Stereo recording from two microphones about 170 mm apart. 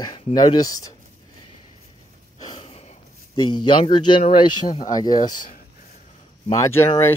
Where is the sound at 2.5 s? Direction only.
35° left (ahead or behind).